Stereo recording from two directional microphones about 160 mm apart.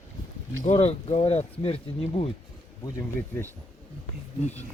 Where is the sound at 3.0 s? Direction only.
10° left (ahead or behind).